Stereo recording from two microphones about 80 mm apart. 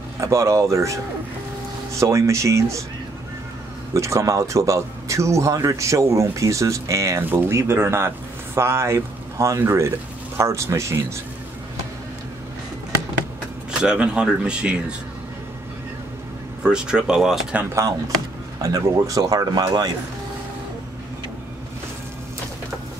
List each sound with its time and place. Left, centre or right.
0.2 s speech: right
3.9 s speech: right
7.2 s speech: right
13.7 s speech: centre
16.6 s speech: centre
18.6 s speech: right